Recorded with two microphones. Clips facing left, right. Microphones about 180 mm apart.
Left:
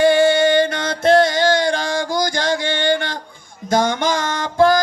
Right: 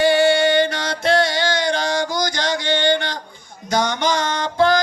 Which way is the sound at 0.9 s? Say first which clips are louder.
Left 4 dB; 50° left (ahead or behind).